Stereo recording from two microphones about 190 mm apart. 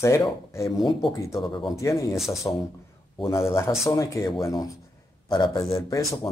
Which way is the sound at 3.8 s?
15° left (ahead or behind).